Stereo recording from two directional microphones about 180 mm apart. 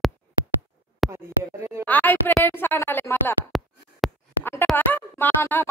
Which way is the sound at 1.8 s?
10° left (ahead or behind).